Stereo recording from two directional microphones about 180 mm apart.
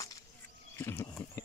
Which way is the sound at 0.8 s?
15° left (ahead or behind).